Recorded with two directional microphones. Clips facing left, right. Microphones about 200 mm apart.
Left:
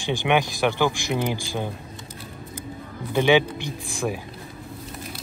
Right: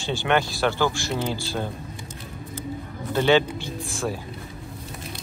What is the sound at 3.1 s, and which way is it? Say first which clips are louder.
Speech: left 1 dB; 15° left (ahead or behind).